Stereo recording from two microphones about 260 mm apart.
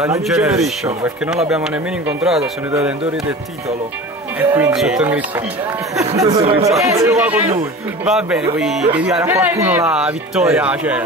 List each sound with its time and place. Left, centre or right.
0.0 s speech: centre
4.4 s speech: centre
6.2 s speech: right
6.8 s speech: centre